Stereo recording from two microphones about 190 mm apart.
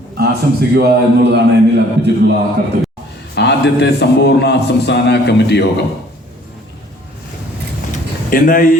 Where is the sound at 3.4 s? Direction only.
65° left (ahead or behind).